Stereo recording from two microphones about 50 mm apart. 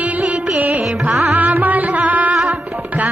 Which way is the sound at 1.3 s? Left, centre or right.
Right.